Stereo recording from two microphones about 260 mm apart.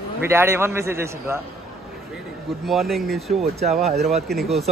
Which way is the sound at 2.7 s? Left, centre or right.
Centre.